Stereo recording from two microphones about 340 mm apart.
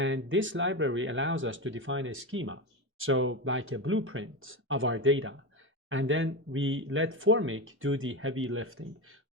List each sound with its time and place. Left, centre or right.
0.0 s speech: right